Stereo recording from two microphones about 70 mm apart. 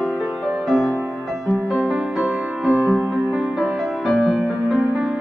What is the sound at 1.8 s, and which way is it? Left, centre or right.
Music, centre.